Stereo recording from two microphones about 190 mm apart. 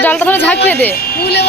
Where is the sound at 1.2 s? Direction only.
60° left (ahead or behind).